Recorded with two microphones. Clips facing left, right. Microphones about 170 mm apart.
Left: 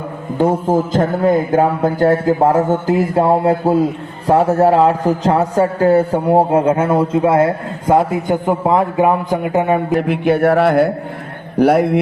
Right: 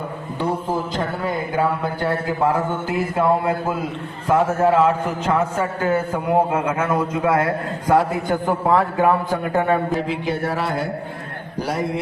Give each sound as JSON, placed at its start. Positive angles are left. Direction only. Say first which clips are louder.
{"t": 0.3, "sound": "a man's voice", "louder": "left 9 dB", "side_deg": 45}
{"t": 9.9, "sound": "speech", "louder": "left 8 dB", "side_deg": 60}